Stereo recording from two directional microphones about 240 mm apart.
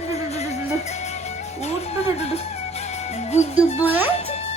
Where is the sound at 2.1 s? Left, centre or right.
Left.